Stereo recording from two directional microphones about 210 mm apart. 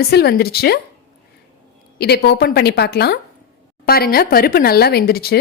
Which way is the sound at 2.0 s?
50° left (ahead or behind).